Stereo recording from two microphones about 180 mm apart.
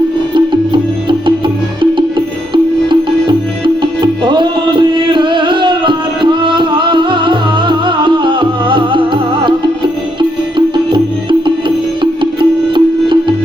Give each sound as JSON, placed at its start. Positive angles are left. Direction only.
{"t": 0.3, "sound": "music", "side_deg": -25}
{"t": 4.0, "sound": "music", "side_deg": -25}
{"t": 10.9, "sound": "music", "side_deg": -25}